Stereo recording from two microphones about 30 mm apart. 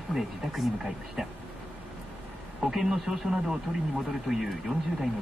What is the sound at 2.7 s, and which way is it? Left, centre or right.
Speech, centre.